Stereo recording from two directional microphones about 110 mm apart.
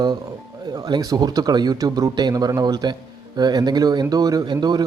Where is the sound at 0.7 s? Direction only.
40° right (ahead or behind).